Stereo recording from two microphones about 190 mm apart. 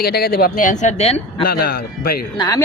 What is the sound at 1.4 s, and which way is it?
Speech, 50° left (ahead or behind).